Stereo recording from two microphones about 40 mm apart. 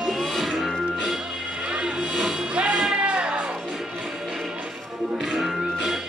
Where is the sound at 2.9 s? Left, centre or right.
Right.